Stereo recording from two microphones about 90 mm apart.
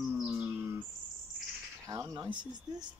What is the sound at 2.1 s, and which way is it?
Speech, 50° right (ahead or behind).